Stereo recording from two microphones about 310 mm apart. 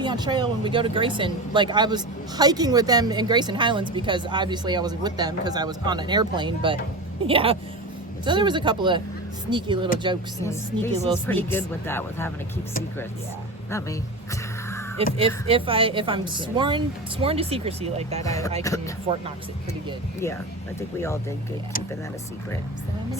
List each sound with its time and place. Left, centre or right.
0.0 s speech: centre
10.4 s speech: centre
14.9 s speech: centre
18.2 s speech: centre
19.1 s speech: centre
21.0 s speech: centre